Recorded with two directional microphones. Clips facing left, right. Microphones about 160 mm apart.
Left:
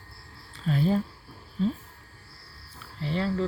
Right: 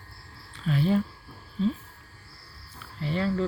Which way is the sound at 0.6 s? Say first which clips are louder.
Even; 35° left (ahead or behind).